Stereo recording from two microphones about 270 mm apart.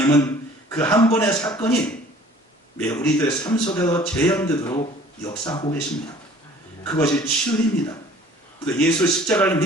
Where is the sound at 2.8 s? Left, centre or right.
Centre.